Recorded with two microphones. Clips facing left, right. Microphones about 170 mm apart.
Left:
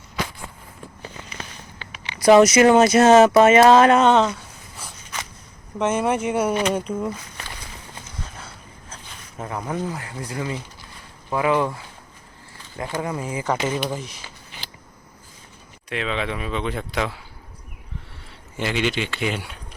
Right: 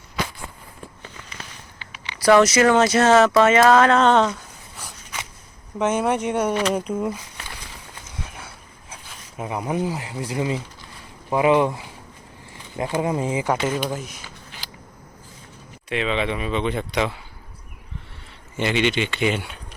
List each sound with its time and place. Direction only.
1.9 s speech: 20° left (ahead or behind)
4.0 s a sound: centre (ahead or behind)
5.8 s speech: centre (ahead or behind)
9.4 s speech: 15° right (ahead or behind)
13.0 s speech: 20° right (ahead or behind)
13.5 s speech: 5° right (ahead or behind)
15.9 s speech: centre (ahead or behind)
18.5 s speech: centre (ahead or behind)